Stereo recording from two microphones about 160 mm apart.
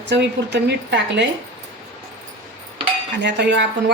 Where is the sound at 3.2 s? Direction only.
90° right.